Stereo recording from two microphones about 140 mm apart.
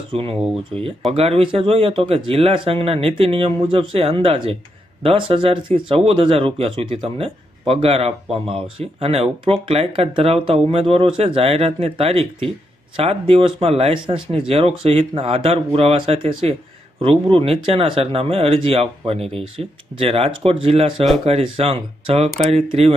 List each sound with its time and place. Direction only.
0.1 s speech: 40° right (ahead or behind)